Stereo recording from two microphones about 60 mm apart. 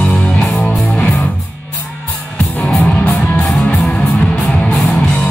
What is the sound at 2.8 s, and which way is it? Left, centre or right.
Music, left.